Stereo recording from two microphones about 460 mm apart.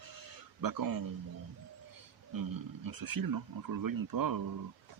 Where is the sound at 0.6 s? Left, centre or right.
Right.